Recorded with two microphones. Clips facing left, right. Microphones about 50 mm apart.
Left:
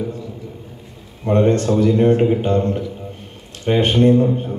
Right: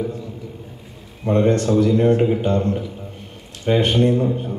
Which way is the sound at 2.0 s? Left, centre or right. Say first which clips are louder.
Left 2 dB; left.